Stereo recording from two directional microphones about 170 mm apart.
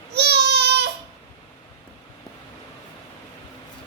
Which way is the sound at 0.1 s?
75° right (ahead or behind).